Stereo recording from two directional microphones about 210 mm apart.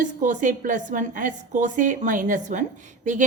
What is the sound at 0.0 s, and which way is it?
A woman's voice, 35° right (ahead or behind).